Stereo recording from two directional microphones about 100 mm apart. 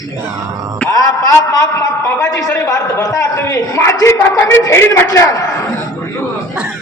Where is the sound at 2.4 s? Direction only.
40° left (ahead or behind).